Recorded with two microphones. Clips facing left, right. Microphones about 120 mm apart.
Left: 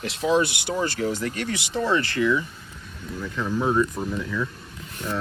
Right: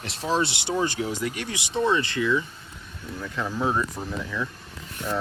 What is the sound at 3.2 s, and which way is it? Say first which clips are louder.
Speech: left 2 dB; 5° right (ahead or behind).